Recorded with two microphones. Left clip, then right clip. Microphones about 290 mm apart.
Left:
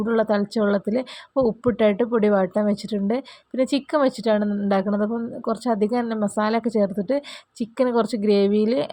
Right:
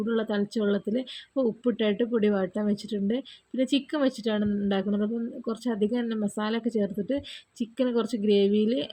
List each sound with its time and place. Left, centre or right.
0.0 s speech: centre